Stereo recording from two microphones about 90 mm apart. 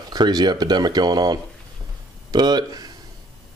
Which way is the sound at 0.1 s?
50° right (ahead or behind).